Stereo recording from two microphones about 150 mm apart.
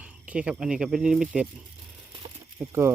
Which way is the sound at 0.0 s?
10° right (ahead or behind).